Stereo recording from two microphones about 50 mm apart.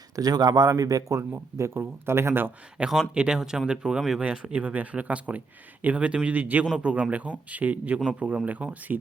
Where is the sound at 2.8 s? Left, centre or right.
Right.